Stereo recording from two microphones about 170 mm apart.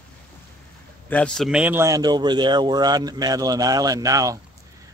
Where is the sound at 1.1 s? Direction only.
5° left (ahead or behind).